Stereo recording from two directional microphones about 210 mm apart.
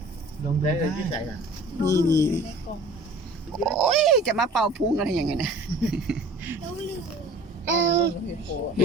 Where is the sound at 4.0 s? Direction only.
Centre (ahead or behind).